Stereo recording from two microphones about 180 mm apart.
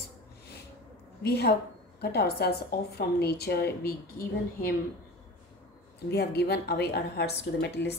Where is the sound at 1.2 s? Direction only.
65° left (ahead or behind).